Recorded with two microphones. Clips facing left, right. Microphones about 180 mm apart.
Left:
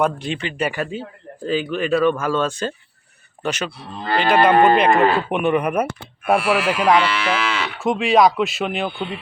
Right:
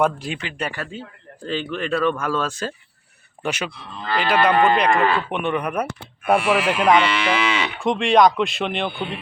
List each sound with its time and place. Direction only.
0.0 s moo: 5° right (ahead or behind)
0.7 s a man's voice: 15° left (ahead or behind)
1.5 s moo: 5° left (ahead or behind)
3.4 s speech: 10° right (ahead or behind)
4.0 s speech: 40° left (ahead or behind)
5.3 s moo: 5° left (ahead or behind)